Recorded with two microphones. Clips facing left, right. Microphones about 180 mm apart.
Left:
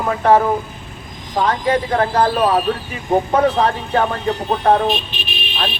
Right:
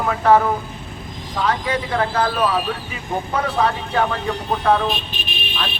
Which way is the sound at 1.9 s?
35° left (ahead or behind).